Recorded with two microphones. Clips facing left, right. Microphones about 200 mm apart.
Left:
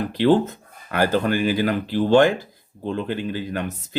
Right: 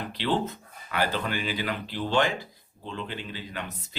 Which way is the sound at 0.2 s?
45° left (ahead or behind).